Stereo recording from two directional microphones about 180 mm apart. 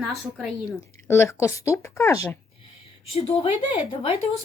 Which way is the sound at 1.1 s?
15° left (ahead or behind).